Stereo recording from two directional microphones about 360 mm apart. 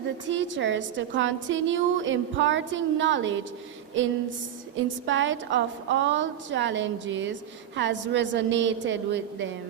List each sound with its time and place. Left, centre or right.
0.3 s a woman's voice: right
5.0 s a woman's voice: right